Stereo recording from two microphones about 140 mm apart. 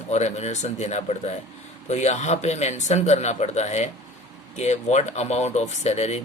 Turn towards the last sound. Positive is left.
turn(degrees=50)  # may be behind; listen again after turning